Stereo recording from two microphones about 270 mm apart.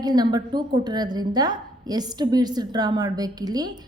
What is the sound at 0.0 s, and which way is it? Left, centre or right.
A woman's voice, centre.